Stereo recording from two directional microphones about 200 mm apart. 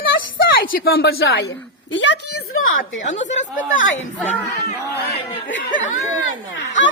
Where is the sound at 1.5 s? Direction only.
65° left (ahead or behind); by 2.8 s 85° left.